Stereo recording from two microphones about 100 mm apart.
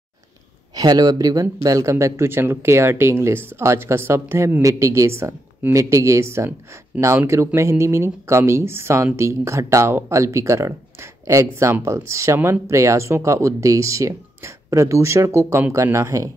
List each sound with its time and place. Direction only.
0.7 s speech: 40° right (ahead or behind)